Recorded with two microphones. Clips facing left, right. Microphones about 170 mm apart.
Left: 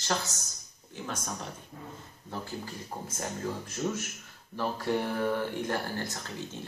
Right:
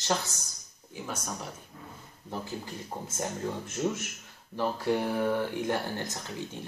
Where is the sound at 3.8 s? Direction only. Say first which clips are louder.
Right 2 dB; 10° right (ahead or behind).